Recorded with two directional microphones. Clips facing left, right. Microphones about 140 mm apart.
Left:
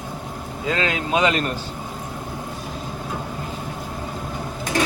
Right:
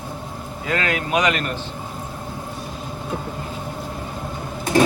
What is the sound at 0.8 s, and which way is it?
Speech, 25° left (ahead or behind).